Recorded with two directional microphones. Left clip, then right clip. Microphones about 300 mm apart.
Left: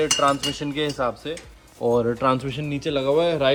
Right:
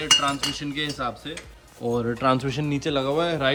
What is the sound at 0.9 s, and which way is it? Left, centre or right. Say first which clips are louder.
Speech: left 4 dB; centre.